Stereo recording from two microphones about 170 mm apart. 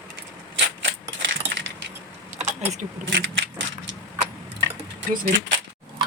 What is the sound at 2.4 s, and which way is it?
Keys jangling, 40° right (ahead or behind).